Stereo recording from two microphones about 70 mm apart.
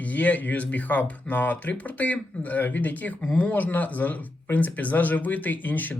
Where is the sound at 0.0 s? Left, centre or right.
Left.